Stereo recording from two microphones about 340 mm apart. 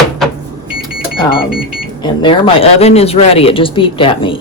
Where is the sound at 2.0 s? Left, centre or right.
Centre.